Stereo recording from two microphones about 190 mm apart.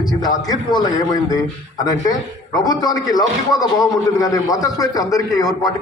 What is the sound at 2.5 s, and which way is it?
A man's voice, 20° left (ahead or behind).